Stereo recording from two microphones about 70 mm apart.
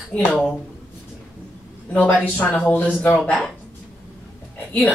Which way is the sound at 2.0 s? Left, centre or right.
Centre.